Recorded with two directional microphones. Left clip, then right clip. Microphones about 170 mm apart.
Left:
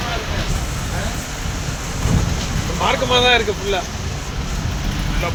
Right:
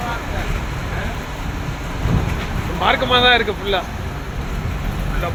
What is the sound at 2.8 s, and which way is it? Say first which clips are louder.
Speech: right 1 dB; 15° left (ahead or behind).